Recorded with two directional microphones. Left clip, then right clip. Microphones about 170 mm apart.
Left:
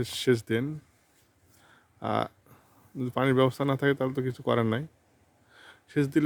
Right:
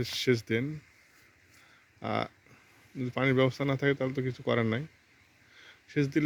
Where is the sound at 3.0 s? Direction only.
20° left (ahead or behind).